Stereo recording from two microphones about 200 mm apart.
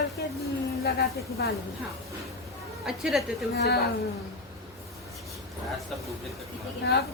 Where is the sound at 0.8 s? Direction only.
50° left (ahead or behind).